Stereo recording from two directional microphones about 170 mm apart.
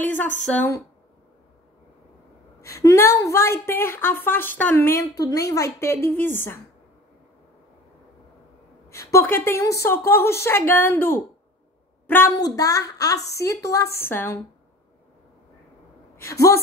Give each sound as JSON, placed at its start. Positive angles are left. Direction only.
{"t": 0.0, "sound": "a woman's voice", "side_deg": 10}
{"t": 2.8, "sound": "a woman's voice", "side_deg": 15}
{"t": 8.8, "sound": "a woman's voice", "side_deg": 15}
{"t": 16.2, "sound": "a woman's voice", "side_deg": 20}